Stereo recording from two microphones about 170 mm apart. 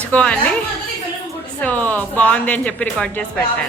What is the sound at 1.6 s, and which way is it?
Speech, 10° left (ahead or behind).